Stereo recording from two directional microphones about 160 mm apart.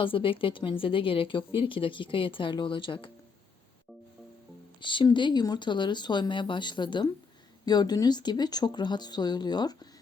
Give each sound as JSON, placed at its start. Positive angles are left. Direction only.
{"t": 0.0, "sound": "a woman's voice", "side_deg": 35}
{"t": 4.8, "sound": "speech", "side_deg": 30}